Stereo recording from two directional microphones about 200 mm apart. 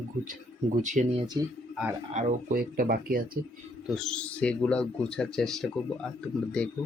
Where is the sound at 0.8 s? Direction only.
40° right (ahead or behind).